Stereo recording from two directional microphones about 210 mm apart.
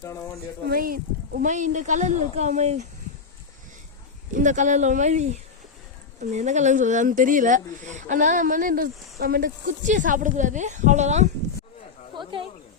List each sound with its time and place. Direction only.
0.7 s speech: 45° right (ahead or behind)
4.4 s speech: 35° right (ahead or behind)